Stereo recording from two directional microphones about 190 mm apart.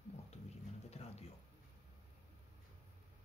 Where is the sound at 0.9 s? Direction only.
35° left (ahead or behind).